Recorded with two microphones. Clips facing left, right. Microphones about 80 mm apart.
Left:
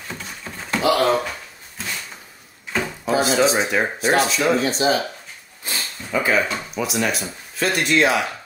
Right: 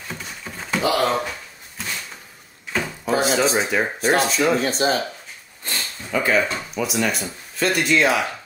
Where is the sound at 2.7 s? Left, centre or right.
Centre.